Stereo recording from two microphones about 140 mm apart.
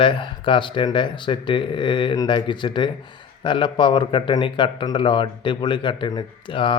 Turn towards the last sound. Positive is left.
turn(degrees=35)  # may be behind; listen again after turning